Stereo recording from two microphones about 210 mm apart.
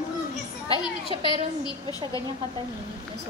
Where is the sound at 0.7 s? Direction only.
25° left (ahead or behind).